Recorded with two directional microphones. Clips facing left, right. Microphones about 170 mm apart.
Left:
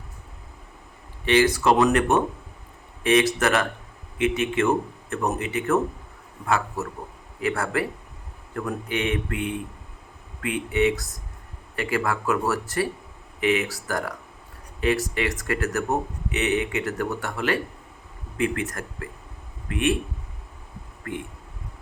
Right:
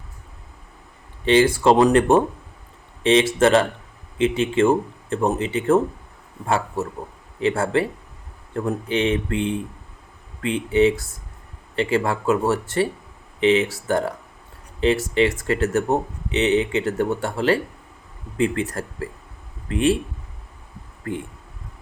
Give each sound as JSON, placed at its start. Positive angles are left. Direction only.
{"t": 1.2, "sound": "speech", "side_deg": -30}
{"t": 21.0, "sound": "speech", "side_deg": -30}